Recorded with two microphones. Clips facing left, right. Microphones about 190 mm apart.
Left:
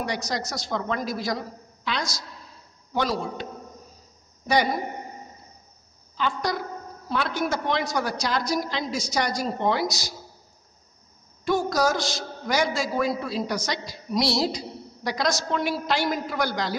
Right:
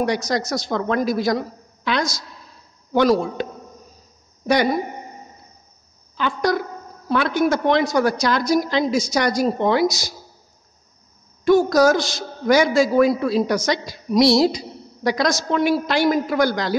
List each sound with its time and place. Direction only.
0.0 s a woman's voice: 80° right
2.9 s a woman's voice: 70° right (ahead or behind)
6.1 s a woman's voice: 75° right (ahead or behind)
11.4 s a woman's voice: 85° right
12.9 s a woman's voice: 70° right (ahead or behind)
13.7 s a woman's voice: 85° right